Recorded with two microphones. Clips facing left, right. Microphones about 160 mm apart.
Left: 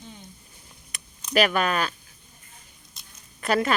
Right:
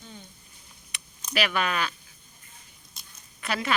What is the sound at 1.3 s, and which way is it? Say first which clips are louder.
Speech: left 5 dB; 45° left (ahead or behind).